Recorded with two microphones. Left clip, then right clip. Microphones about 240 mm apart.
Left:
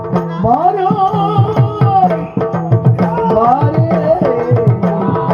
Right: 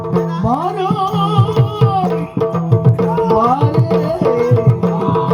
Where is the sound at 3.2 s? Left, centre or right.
Right.